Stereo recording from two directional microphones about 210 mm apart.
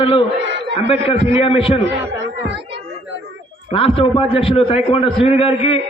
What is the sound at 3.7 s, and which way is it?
A man's voice, 25° left (ahead or behind).